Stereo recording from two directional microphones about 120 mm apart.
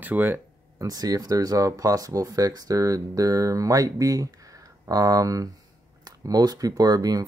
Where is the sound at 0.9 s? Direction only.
30° right (ahead or behind).